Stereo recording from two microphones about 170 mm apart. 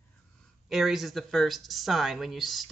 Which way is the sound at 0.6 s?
Centre (ahead or behind).